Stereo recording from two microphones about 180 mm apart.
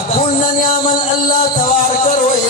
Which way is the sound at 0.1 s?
40° left (ahead or behind).